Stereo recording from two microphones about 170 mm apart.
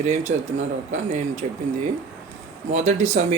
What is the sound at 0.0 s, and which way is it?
Speech, 40° right (ahead or behind).